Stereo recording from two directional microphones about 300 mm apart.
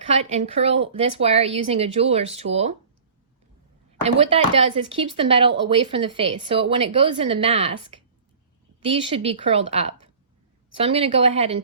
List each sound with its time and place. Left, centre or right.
0.1 s a woman's voice: right
4.0 s a woman's voice: centre
8.8 s a woman's voice: centre